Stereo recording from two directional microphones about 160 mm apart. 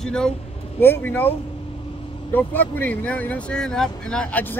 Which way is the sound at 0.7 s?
15° left (ahead or behind).